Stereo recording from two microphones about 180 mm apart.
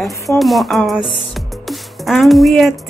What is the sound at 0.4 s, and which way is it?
Speech, centre (ahead or behind).